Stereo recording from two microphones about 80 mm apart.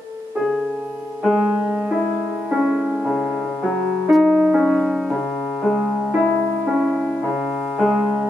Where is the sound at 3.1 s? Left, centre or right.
Centre.